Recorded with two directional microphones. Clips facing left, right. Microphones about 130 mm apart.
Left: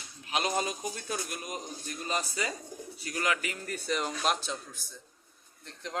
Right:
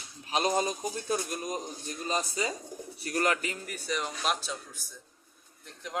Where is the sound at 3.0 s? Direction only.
45° right (ahead or behind).